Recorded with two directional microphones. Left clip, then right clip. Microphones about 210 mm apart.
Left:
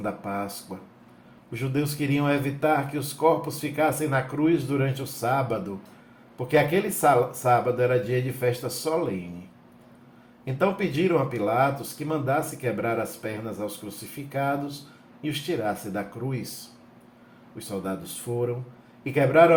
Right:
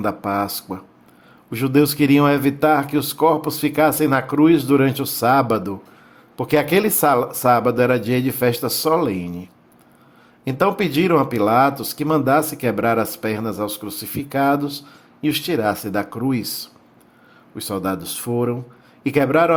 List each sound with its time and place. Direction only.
0.0 s speech: 55° right (ahead or behind)
10.4 s speech: 55° right (ahead or behind)
17.6 s speech: 55° right (ahead or behind)